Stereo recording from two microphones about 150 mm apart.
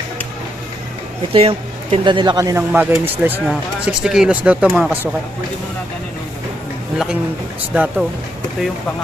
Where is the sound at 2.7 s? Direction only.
15° right (ahead or behind).